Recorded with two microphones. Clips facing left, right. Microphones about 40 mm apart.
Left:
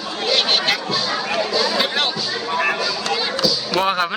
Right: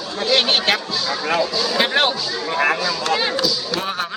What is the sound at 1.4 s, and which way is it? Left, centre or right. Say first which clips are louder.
Speech: left 2 dB; left.